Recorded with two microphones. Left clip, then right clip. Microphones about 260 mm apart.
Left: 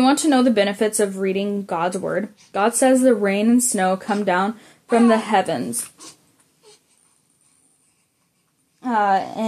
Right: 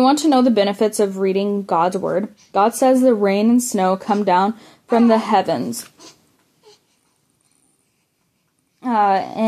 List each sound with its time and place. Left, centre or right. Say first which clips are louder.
0.0 s a woman's voice: right 2 dB; right
8.7 s a woman's voice: right 2 dB; right